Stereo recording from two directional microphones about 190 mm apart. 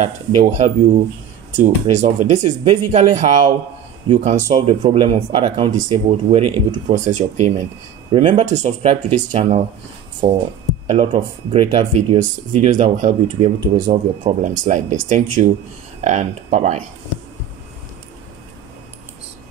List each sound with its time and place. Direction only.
0.0 s speech: 40° right (ahead or behind)
6.7 s speech: 40° right (ahead or behind)
10.9 s speech: 30° right (ahead or behind)